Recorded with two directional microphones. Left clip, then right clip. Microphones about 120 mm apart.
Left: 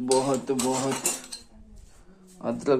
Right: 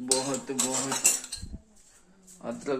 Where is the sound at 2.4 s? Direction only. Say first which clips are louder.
Left 8 dB; 35° left (ahead or behind).